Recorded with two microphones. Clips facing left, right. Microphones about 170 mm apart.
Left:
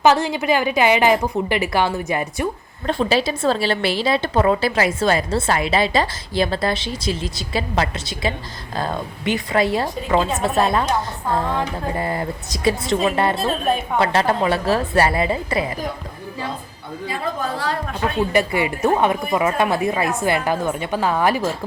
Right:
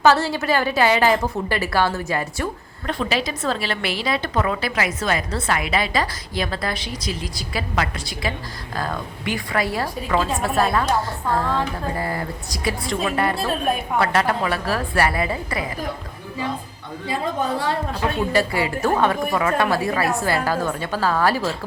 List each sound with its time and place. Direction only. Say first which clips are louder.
0.0 s a woman's voice: left 1 dB; 15° left (ahead or behind)
2.8 s a woman's voice: left 5 dB; 30° left (ahead or behind)
18.3 s a woman's voice: left 1 dB; 20° left (ahead or behind)